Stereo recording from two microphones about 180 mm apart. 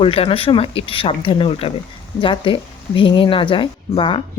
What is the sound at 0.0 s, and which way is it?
A woman's voice, 30° left (ahead or behind).